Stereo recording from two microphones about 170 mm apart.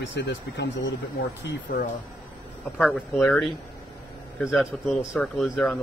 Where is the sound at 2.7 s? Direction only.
Centre (ahead or behind).